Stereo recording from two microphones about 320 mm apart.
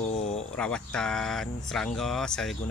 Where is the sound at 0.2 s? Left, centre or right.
Left.